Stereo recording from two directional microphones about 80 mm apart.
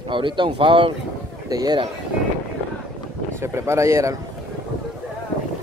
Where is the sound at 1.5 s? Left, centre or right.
Right.